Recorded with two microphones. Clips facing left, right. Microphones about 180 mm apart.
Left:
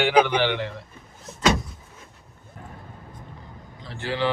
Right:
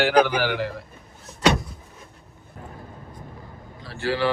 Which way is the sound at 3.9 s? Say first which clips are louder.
Right 2 dB; 20° left (ahead or behind).